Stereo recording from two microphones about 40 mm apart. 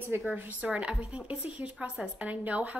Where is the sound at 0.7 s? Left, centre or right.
Right.